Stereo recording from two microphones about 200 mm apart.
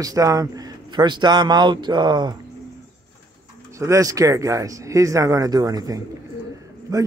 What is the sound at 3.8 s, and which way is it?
A man's voice, 15° right (ahead or behind).